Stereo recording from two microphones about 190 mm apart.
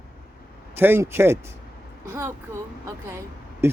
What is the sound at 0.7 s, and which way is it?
Speech, 10° right (ahead or behind).